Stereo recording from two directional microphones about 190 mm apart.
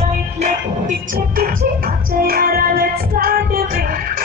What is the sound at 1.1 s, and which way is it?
Music, 50° right (ahead or behind).